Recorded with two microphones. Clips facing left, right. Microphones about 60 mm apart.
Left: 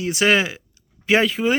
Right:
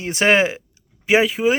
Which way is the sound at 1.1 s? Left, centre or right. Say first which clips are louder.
Right 2 dB; centre.